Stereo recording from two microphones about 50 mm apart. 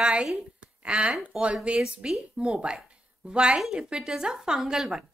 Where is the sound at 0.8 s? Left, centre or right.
Right.